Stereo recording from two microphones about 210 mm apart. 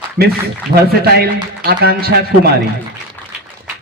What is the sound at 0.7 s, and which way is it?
A man's voice, 50° right (ahead or behind).